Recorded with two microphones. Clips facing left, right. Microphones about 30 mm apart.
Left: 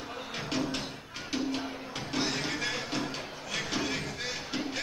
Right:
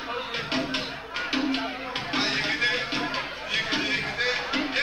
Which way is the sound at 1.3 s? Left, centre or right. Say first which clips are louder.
Right 5 dB; right.